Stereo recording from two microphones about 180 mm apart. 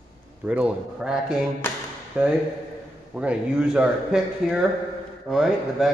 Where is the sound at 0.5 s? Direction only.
5° right (ahead or behind).